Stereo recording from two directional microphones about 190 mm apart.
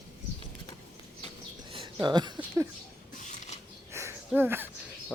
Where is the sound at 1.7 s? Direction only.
25° right (ahead or behind).